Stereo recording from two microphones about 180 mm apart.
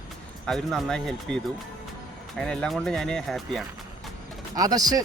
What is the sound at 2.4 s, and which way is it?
Speech, 5° left (ahead or behind).